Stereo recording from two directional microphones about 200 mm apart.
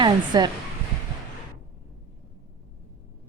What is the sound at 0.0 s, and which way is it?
Speech, 20° right (ahead or behind).